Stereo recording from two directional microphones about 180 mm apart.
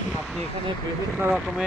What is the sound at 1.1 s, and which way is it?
Speech, centre (ahead or behind).